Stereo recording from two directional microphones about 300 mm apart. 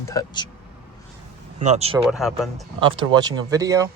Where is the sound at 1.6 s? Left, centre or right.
Right.